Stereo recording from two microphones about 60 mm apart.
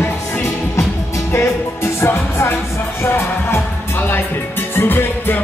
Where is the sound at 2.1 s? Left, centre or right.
Left.